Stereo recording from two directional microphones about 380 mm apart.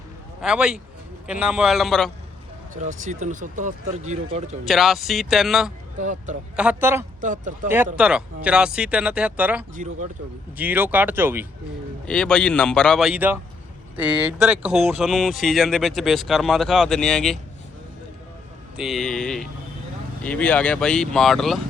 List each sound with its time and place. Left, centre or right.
0.4 s speech: centre
2.7 s speech: centre
4.6 s speech: centre
6.0 s speech: centre
6.6 s speech: centre
7.2 s speech: centre
7.9 s speech: centre
9.7 s speech: centre
10.6 s speech: centre
18.8 s speech: centre